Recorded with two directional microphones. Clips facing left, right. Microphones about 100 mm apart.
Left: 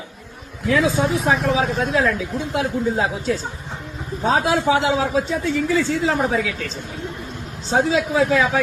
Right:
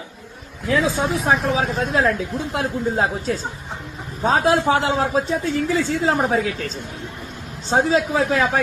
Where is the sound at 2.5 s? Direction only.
40° right (ahead or behind).